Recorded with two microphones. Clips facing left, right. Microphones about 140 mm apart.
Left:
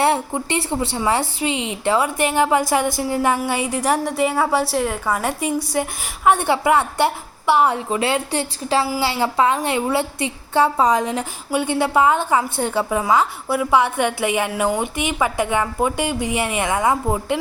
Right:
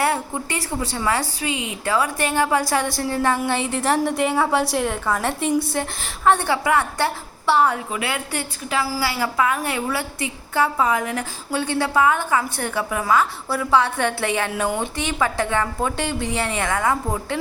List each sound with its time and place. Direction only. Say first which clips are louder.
0.0 s a woman's voice: left 3 dB; 25° left (ahead or behind); by 5.9 s 10° left (ahead or behind)
6.2 s a woman's voice: left 2 dB; 20° left (ahead or behind)
7.9 s a woman's voice: left 6 dB; 30° left (ahead or behind)
11.0 s a woman's voice: left 3 dB; 20° left (ahead or behind)